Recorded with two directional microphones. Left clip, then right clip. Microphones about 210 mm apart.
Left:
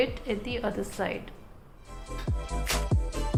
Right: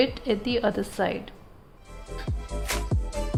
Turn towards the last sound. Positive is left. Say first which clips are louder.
# right 1 dB
turn(degrees=0)  # may be behind; listen again after turning